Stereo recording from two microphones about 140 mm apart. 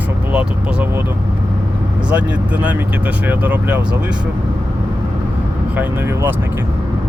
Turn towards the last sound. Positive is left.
turn(degrees=-15)  # may be behind; listen again after turning